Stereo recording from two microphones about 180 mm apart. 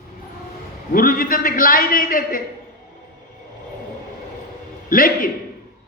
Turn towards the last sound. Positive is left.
turn(degrees=50)  # may be behind; listen again after turning